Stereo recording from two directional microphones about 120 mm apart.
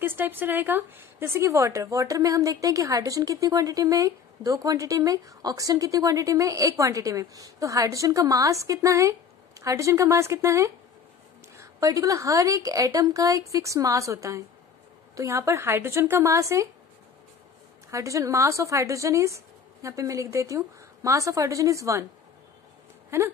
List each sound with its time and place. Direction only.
0.0 s a woman's voice: 15° right (ahead or behind)
17.9 s a woman's voice: 25° right (ahead or behind)
23.0 s a sound: 20° right (ahead or behind)